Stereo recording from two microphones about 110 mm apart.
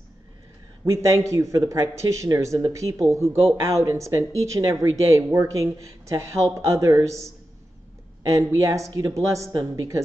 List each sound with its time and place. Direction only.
0.8 s speech: 30° right (ahead or behind)
8.3 s speech: 30° right (ahead or behind)